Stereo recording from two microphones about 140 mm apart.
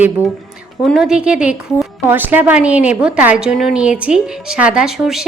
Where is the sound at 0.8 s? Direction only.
Centre (ahead or behind).